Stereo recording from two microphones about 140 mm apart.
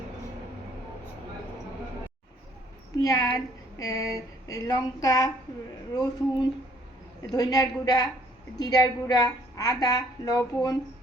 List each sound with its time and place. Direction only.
3.0 s speech: 25° left (ahead or behind)